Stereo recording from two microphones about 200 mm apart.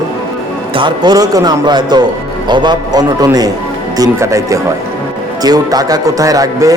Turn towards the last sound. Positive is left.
turn(degrees=-15)  # may be behind; listen again after turning